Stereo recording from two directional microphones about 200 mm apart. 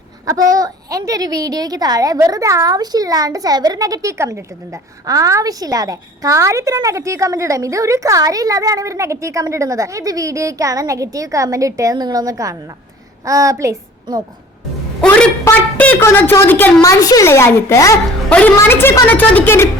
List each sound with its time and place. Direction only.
0.5 s a woman's voice: 15° right (ahead or behind)
15.0 s a woman's voice: 5° left (ahead or behind)